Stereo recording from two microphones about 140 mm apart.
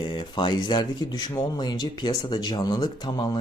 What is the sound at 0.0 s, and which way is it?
Speech, 35° left (ahead or behind).